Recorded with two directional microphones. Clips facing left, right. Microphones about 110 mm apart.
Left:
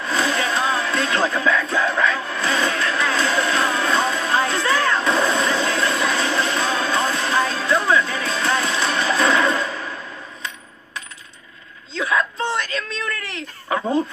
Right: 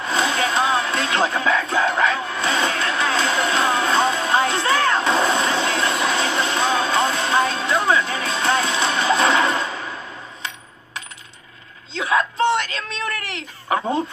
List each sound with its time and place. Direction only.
0.0 s music: 20° right (ahead or behind)
11.9 s whimper: 25° right (ahead or behind)
13.7 s a sound: 25° right (ahead or behind)